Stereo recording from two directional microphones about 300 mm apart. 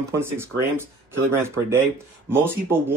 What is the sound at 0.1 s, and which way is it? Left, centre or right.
Speech, centre.